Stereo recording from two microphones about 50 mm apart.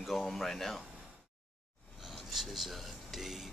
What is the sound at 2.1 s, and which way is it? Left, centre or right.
Speech, centre.